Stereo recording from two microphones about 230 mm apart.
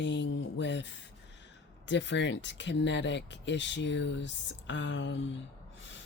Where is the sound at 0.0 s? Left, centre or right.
Left.